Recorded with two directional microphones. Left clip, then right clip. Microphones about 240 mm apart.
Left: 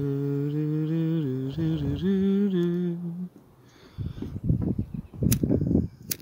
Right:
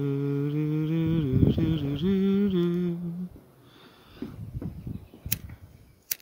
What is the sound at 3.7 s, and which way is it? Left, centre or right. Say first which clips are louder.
Sniff: left 7 dB; centre.